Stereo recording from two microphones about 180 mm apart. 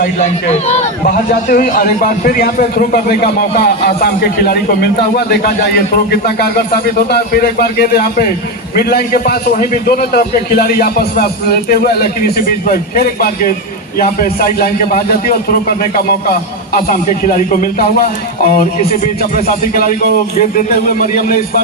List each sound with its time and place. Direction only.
0.0 s a man's voice: 40° left (ahead or behind); by 5.8 s 60° left (ahead or behind)
7.1 s a man's voice: 60° left (ahead or behind)
17.2 s a man's voice: 50° left (ahead or behind)